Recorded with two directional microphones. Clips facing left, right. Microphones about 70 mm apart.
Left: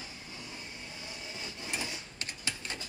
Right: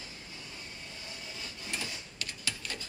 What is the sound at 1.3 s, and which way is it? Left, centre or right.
Printer, left.